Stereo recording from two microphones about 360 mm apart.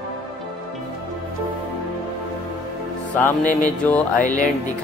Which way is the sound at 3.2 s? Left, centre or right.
Centre.